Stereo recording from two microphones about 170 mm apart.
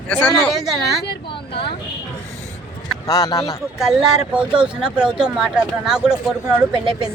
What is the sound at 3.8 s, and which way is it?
Speech, 5° right (ahead or behind).